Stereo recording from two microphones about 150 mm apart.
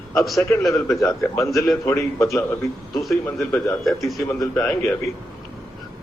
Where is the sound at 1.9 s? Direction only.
20° left (ahead or behind).